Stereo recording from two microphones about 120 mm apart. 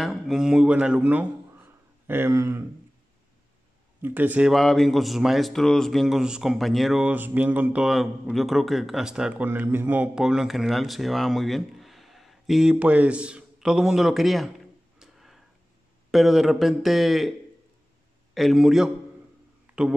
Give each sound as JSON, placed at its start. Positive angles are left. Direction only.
{"t": 0.0, "sound": "a man's voice", "side_deg": 0}
{"t": 4.0, "sound": "a man's voice", "side_deg": -15}
{"t": 4.5, "sound": "speech", "side_deg": 0}
{"t": 10.2, "sound": "speech", "side_deg": -5}
{"t": 15.0, "sound": "a sound", "side_deg": 0}
{"t": 16.1, "sound": "speech", "side_deg": 0}
{"t": 18.3, "sound": "speech", "side_deg": 0}
{"t": 19.6, "sound": "a sound", "side_deg": -5}